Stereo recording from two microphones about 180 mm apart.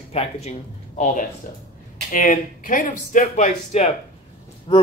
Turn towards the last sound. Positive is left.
turn(degrees=30)  # may be behind; listen again after turning